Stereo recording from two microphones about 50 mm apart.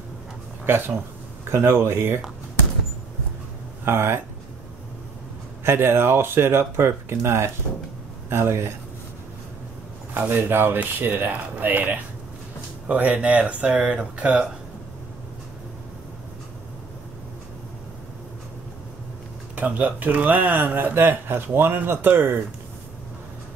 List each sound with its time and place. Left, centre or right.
0.7 s speech: right
3.8 s speech: right
5.6 s speech: right
10.1 s speech: right
19.5 s speech: right